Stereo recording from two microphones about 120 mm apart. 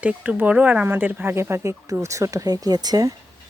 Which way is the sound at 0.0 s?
10° right (ahead or behind).